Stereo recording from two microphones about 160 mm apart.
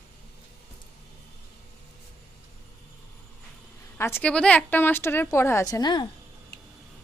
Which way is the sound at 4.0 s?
15° left (ahead or behind).